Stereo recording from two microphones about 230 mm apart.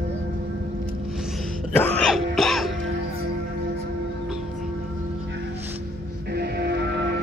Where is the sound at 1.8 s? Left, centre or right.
Centre.